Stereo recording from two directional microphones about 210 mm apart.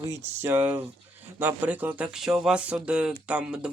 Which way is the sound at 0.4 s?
10° right (ahead or behind).